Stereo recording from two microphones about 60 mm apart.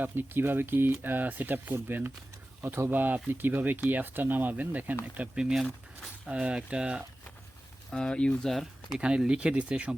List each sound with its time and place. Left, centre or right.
0.0 s speech: right
2.6 s speech: right; by 7.0 s centre
7.9 s speech: centre
8.4 s speech: centre
9.0 s speech: centre